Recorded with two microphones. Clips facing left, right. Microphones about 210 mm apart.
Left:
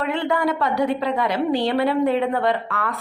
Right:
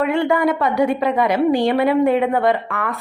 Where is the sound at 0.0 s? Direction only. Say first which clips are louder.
Right 5 dB; 10° right (ahead or behind).